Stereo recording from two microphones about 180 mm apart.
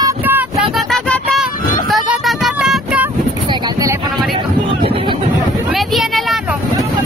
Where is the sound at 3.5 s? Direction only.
20° right (ahead or behind).